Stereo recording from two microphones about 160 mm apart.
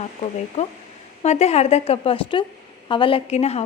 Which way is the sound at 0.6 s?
40° left (ahead or behind).